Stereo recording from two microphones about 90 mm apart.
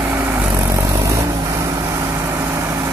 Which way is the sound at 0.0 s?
25° right (ahead or behind).